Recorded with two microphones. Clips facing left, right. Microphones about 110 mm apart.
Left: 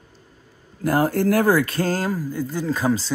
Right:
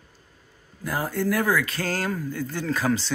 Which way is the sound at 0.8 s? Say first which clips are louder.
Left 7 dB; 65° left (ahead or behind).